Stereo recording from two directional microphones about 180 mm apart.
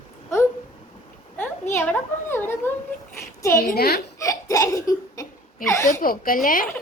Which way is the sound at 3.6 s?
60° left (ahead or behind).